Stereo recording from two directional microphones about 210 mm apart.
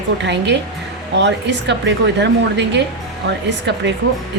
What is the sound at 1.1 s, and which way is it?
Speech, 55° right (ahead or behind).